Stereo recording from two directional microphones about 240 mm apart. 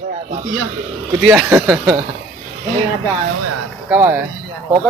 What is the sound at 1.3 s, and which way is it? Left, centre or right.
Speech, centre.